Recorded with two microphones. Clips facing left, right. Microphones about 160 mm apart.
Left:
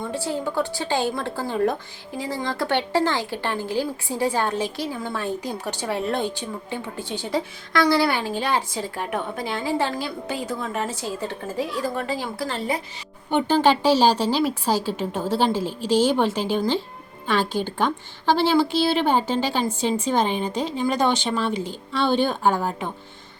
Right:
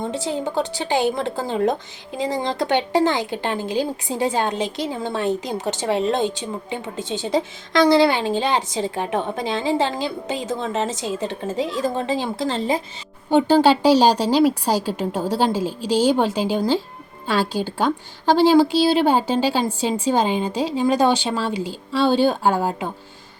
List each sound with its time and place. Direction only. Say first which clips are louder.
0.0 s a woman's voice: right 2 dB; 20° right (ahead or behind)
13.5 s a woman's voice: right 3 dB; 10° right (ahead or behind)